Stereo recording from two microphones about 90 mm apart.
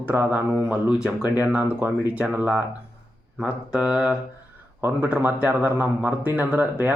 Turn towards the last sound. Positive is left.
turn(degrees=-20)  # may be behind; listen again after turning